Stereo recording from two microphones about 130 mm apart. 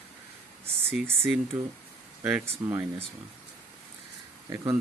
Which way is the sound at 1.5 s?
20° right (ahead or behind).